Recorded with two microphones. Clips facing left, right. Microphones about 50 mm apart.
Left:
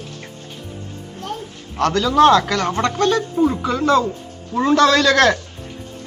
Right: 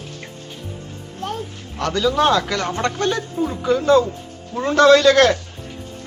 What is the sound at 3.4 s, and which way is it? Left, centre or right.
Speech, left.